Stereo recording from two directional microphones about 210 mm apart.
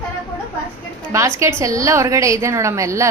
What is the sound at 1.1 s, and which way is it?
A woman's voice, 15° right (ahead or behind).